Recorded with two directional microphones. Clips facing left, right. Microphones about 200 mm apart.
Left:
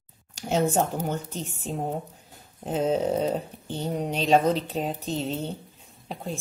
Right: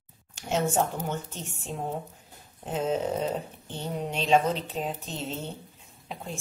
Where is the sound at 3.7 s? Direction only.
35° left (ahead or behind).